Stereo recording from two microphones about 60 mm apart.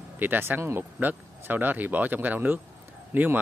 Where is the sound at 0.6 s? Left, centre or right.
Right.